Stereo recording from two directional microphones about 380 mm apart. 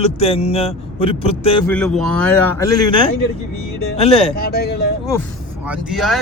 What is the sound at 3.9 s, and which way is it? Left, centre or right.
Speech, centre.